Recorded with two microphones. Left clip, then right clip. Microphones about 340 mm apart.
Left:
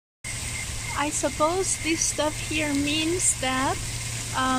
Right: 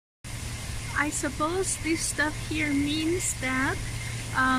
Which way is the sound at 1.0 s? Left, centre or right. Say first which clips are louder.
Left 3 dB; centre.